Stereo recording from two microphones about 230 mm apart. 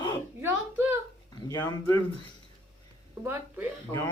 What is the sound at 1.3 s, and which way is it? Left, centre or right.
Speech, centre.